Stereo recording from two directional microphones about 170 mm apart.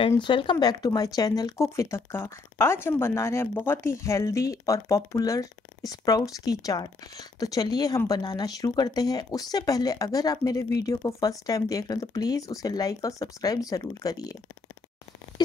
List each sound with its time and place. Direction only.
0.2 s speech: 30° left (ahead or behind)